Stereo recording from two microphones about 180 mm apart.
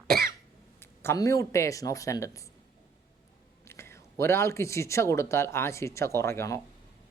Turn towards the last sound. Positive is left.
turn(degrees=15)  # may be behind; listen again after turning